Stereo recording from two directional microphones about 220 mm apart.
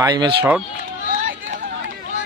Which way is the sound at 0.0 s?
20° right (ahead or behind).